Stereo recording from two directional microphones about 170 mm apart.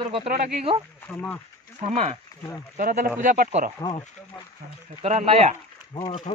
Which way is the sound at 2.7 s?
55° right (ahead or behind).